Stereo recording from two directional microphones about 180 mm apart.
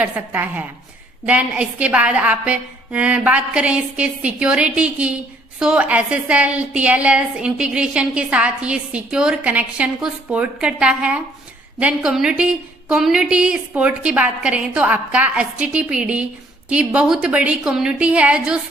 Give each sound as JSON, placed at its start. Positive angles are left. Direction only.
{"t": 0.0, "sound": "a woman's voice", "side_deg": -10}